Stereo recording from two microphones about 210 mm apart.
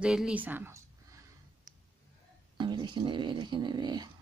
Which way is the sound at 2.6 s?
20° right (ahead or behind).